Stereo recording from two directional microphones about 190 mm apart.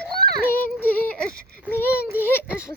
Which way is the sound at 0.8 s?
10° left (ahead or behind).